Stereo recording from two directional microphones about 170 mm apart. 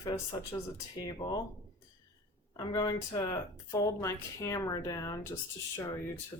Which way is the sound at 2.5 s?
25° left (ahead or behind).